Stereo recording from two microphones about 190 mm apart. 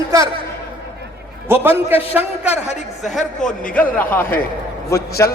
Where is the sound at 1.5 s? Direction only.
10° right (ahead or behind).